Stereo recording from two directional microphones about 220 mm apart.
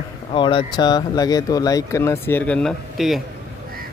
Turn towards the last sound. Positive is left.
turn(degrees=0)  # may be behind; listen again after turning